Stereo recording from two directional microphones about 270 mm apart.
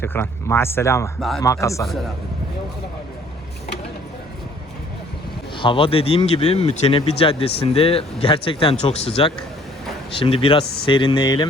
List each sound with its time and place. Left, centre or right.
0.0 s speech: centre
5.5 s speech: centre